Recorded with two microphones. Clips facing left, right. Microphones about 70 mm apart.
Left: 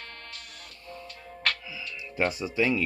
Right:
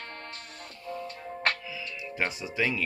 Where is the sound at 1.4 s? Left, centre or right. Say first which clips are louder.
Right 1 dB; right.